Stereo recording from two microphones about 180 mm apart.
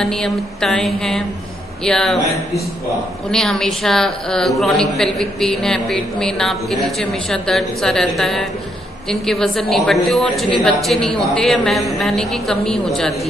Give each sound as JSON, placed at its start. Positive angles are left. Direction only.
{"t": 0.0, "sound": "a woman's voice", "side_deg": 5}
{"t": 3.3, "sound": "a woman's voice", "side_deg": 5}